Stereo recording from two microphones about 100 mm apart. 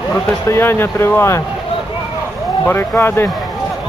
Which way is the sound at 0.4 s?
25° left (ahead or behind).